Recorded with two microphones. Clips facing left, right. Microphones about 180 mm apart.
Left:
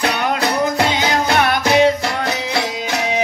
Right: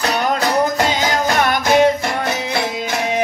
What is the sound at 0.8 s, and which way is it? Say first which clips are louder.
Music: even; 45° right (ahead or behind).